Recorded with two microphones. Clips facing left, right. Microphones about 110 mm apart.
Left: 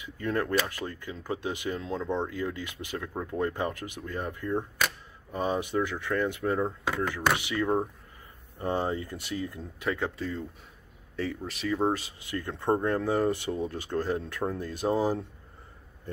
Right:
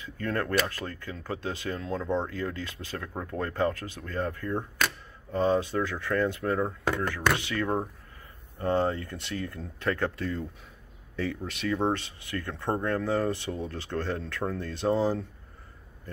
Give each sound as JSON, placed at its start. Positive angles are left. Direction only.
{"t": 0.0, "sound": "speech", "side_deg": 15}
{"t": 12.3, "sound": "speech", "side_deg": 20}